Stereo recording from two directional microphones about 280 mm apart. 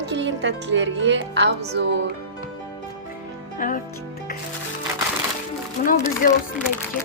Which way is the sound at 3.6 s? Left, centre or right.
Left.